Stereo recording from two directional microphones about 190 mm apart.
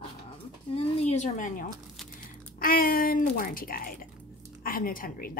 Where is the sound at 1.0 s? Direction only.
35° left (ahead or behind).